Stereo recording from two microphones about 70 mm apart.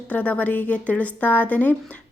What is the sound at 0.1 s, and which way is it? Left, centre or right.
Speech, left.